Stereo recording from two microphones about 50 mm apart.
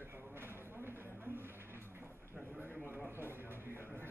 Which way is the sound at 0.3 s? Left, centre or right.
Right.